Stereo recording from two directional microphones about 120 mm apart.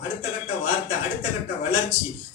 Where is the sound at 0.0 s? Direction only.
45° left (ahead or behind).